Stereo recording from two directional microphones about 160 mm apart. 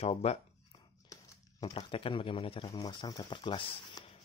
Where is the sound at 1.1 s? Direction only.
20° left (ahead or behind).